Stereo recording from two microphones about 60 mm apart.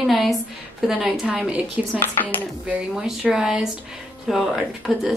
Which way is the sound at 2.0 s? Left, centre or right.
Left.